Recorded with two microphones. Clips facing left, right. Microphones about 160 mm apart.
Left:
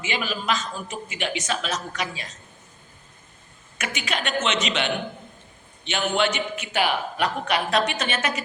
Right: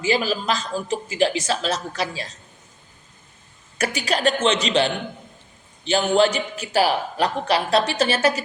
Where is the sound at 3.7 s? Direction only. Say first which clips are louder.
Right 6 dB; 35° right (ahead or behind).